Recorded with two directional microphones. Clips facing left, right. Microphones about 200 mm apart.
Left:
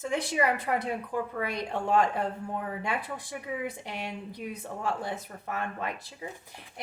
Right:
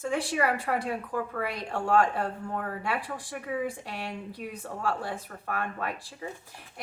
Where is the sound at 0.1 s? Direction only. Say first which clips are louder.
Even; 20° left (ahead or behind).